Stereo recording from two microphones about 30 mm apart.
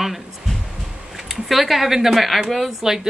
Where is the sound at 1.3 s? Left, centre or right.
Centre.